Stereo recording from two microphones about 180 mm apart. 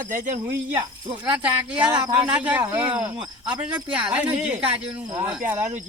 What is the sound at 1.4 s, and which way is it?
Speech, 5° right (ahead or behind).